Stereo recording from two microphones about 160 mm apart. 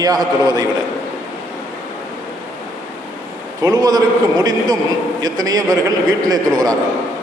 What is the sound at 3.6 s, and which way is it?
A man's voice, 25° right (ahead or behind).